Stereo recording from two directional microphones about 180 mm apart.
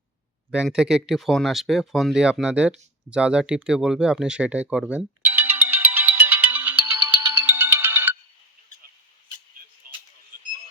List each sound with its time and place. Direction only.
0.5 s speech: 5° right (ahead or behind)
5.2 s ringtone: 10° right (ahead or behind)
9.9 s a sound: 55° right (ahead or behind)